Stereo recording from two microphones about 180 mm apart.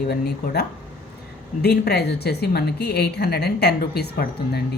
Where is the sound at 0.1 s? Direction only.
60° left (ahead or behind).